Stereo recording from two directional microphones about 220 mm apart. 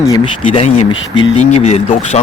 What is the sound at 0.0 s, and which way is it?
Speech, 15° left (ahead or behind).